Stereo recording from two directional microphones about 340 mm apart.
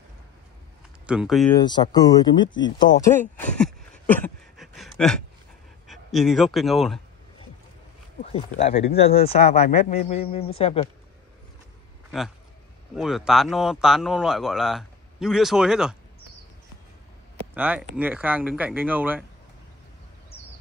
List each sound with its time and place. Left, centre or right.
1.0 s speech: centre
1.6 s speech: centre
3.2 s a sound: centre
5.9 s a man's voice: centre
8.2 s speech: centre
12.9 s speech: centre
17.6 s speech: centre